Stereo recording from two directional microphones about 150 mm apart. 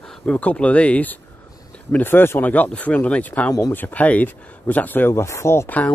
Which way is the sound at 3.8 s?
10° left (ahead or behind).